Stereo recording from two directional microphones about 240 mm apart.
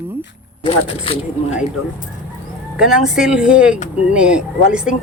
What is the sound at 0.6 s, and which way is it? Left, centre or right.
Speech, left.